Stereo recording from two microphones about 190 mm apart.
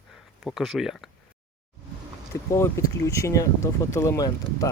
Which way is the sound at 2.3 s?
15° left (ahead or behind).